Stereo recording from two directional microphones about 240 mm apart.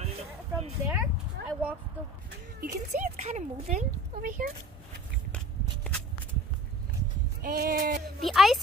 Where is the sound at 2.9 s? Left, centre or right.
Right.